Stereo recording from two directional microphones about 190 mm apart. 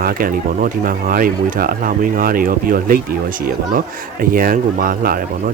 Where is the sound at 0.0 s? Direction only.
50° right (ahead or behind).